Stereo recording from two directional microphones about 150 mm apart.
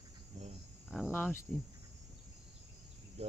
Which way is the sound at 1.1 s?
15° left (ahead or behind).